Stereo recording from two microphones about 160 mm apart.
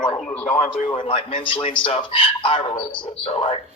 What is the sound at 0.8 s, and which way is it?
A man's voice, 35° left (ahead or behind).